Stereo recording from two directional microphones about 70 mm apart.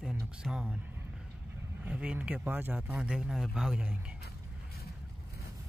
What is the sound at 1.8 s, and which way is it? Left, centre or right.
Speech, centre.